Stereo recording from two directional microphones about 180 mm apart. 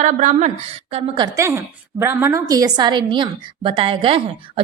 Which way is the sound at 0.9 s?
30° right (ahead or behind).